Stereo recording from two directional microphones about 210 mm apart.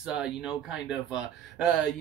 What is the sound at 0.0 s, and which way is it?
Speech, 5° right (ahead or behind).